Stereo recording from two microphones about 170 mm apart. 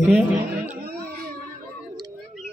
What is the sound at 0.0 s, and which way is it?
Speech, 10° right (ahead or behind).